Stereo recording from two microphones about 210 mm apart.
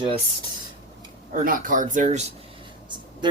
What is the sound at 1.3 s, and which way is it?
Speech, 40° right (ahead or behind).